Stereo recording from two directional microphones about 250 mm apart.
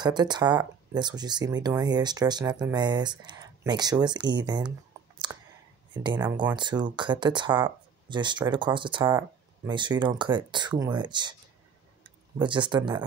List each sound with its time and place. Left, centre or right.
0.0 s speech: centre
5.3 s a sound: centre
6.1 s speech: centre